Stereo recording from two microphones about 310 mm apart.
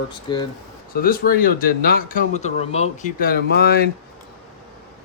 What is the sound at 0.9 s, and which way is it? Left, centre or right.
Speech, left.